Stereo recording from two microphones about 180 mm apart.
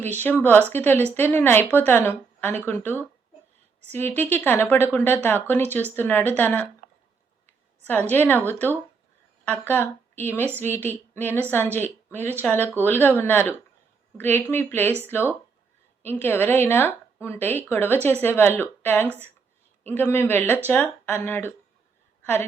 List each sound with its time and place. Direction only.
0.2 s a woman's voice: 10° left (ahead or behind)
8.1 s a woman's voice: 10° left (ahead or behind)